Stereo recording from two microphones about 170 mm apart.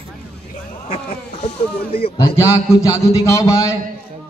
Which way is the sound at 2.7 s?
15° left (ahead or behind).